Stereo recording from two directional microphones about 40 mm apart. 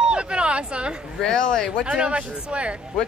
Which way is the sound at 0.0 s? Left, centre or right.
Right.